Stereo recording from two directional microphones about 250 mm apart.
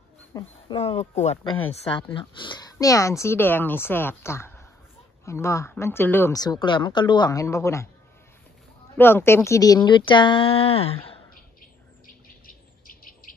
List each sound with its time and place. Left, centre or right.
0.3 s speech: centre
8.9 s speech: centre
12.4 s bird: left